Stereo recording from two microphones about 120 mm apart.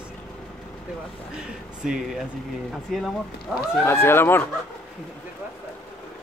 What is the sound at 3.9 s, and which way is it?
Speech, 20° left (ahead or behind).